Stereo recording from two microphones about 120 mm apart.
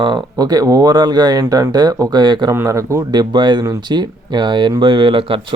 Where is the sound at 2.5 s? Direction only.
25° right (ahead or behind).